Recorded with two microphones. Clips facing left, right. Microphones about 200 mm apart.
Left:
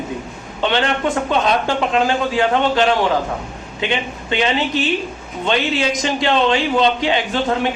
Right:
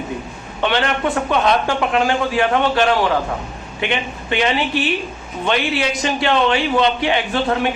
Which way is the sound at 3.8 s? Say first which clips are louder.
Even; 20° left (ahead or behind).